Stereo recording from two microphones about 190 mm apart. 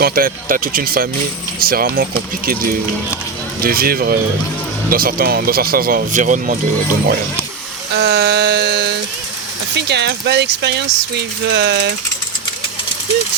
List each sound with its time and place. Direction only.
0.0 s speech: 50° right (ahead or behind)
3.6 s speech: 50° right (ahead or behind)
7.9 s speech: 65° right (ahead or behind)